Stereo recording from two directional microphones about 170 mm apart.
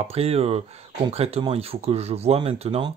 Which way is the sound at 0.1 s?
35° right (ahead or behind).